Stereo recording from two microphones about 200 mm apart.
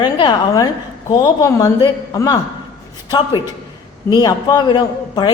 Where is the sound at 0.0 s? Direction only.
20° left (ahead or behind).